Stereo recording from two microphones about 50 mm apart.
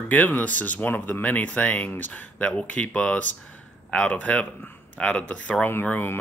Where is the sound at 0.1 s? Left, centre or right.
Left.